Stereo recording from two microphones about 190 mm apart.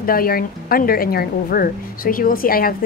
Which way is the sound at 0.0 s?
50° left (ahead or behind).